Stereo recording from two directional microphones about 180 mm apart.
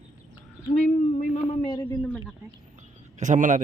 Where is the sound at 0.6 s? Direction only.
40° left (ahead or behind).